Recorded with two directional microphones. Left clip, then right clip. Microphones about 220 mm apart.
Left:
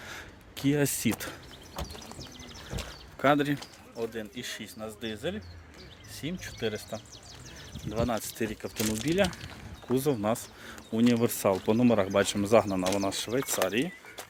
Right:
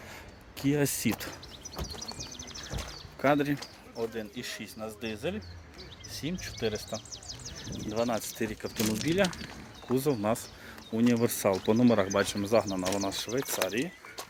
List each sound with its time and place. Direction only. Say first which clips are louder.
0.1 s a sound: left 3 dB; 20° left (ahead or behind)
3.2 s speech: left 2 dB; 20° left (ahead or behind); by 5.4 s centre (ahead or behind)
6.4 s speech: even; centre (ahead or behind)
7.1 s bird: right 5 dB; 35° right (ahead or behind)
7.9 s speech: even; 15° left (ahead or behind); by 13.8 s 30° left (ahead or behind)